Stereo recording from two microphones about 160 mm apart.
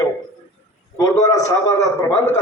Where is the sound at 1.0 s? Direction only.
20° left (ahead or behind).